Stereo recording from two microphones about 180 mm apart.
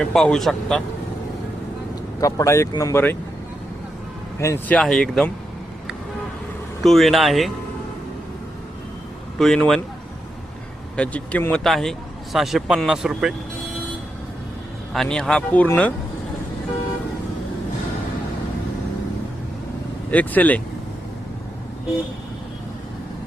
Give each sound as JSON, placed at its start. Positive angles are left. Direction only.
{"t": 0.0, "sound": "speech", "side_deg": 5}
{"t": 2.2, "sound": "speech", "side_deg": 15}
{"t": 4.4, "sound": "speech", "side_deg": 15}
{"t": 6.8, "sound": "speech", "side_deg": 0}
{"t": 9.4, "sound": "speech", "side_deg": 0}
{"t": 10.9, "sound": "speech", "side_deg": 5}
{"t": 14.9, "sound": "speech", "side_deg": 5}
{"t": 20.1, "sound": "speech", "side_deg": 10}